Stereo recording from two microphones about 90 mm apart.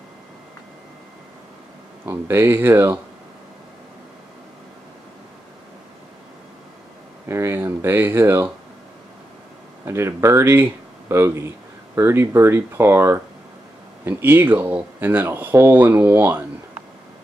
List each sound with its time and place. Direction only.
2.0 s speech: 25° right (ahead or behind)
7.2 s speech: 30° right (ahead or behind)
9.8 s speech: 30° right (ahead or behind)